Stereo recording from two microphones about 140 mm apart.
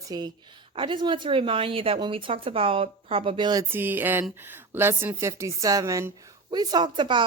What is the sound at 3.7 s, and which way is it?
A woman's voice, 15° right (ahead or behind).